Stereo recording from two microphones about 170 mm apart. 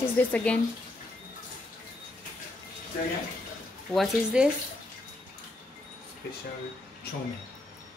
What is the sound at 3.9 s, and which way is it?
Speech, centre (ahead or behind).